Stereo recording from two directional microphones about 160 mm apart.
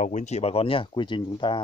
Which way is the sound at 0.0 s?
50° left (ahead or behind).